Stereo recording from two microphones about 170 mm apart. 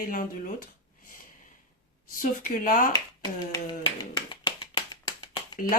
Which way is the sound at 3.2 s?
25° left (ahead or behind).